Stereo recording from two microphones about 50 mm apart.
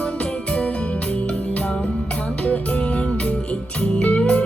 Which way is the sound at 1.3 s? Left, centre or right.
Left.